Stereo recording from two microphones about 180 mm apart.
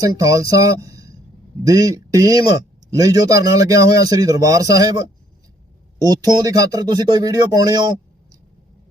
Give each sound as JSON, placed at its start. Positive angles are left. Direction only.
{"t": 0.0, "sound": "speech", "side_deg": -20}